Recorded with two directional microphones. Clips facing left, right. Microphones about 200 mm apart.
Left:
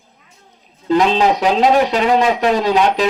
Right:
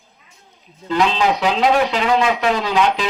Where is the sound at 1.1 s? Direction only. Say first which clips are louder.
Left 4 dB; 40° left (ahead or behind).